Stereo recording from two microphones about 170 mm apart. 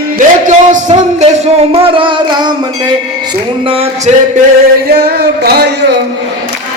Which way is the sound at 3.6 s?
35° right (ahead or behind).